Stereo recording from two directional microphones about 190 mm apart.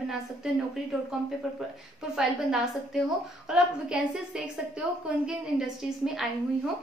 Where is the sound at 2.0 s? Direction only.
5° right (ahead or behind).